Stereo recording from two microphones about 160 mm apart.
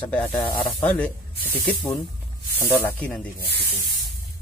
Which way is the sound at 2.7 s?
15° left (ahead or behind).